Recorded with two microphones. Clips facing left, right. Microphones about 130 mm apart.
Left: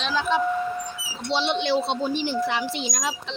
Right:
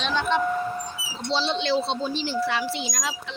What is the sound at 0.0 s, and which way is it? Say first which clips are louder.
Vehicle: even; 5° left (ahead or behind).